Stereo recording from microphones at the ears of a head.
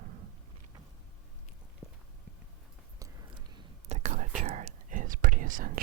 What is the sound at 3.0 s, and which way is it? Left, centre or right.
Whispering, right.